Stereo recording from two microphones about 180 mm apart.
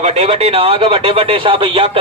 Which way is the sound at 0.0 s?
40° right (ahead or behind).